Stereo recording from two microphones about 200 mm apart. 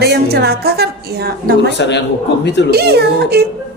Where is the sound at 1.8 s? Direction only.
60° left (ahead or behind).